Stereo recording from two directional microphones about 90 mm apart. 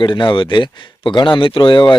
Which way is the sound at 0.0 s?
60° left (ahead or behind).